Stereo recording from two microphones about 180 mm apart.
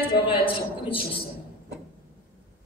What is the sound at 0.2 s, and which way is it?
Speech, 30° left (ahead or behind).